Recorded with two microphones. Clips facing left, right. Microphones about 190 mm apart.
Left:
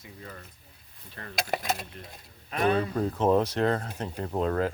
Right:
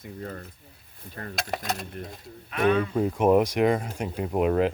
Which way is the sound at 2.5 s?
35° left (ahead or behind).